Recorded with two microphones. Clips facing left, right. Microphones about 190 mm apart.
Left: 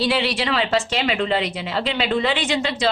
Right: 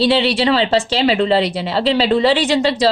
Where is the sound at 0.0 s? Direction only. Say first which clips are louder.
Right 7 dB; 30° right (ahead or behind).